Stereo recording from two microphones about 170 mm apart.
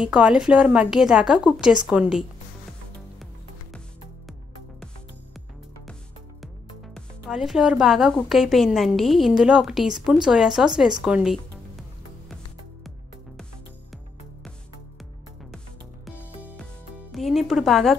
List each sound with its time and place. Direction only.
0.0 s a woman's voice: 5° right (ahead or behind)
6.4 s a woman's voice: centre (ahead or behind)
17.1 s music: centre (ahead or behind)